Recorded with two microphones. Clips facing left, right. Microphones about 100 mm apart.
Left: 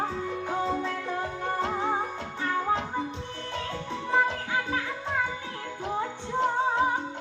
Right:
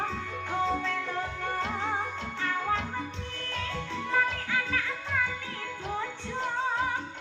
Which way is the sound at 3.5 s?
20° left (ahead or behind).